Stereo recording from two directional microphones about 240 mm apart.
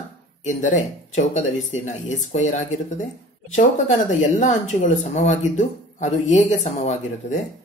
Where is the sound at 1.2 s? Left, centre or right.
Left.